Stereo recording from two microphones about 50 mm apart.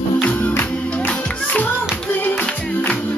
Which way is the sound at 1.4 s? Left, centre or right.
Left.